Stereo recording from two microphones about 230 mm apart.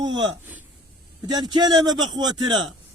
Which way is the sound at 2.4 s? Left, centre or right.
Centre.